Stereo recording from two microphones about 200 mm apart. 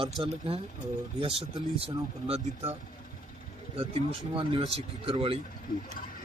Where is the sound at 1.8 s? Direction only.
30° right (ahead or behind).